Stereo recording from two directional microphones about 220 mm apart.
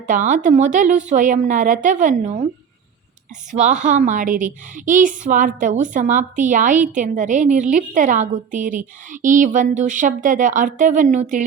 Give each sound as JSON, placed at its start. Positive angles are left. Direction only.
{"t": 0.1, "sound": "a woman's voice", "side_deg": -35}
{"t": 3.5, "sound": "a woman's voice", "side_deg": -35}